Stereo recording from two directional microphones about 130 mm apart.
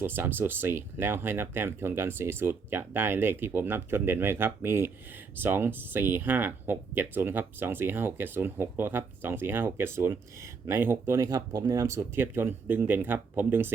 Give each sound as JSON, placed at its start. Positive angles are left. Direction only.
{"t": 0.0, "sound": "speech", "side_deg": -15}